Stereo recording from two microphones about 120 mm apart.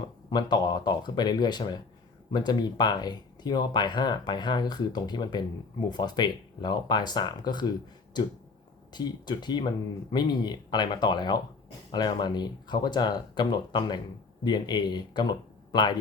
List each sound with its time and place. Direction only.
0.3 s speech: 35° left (ahead or behind)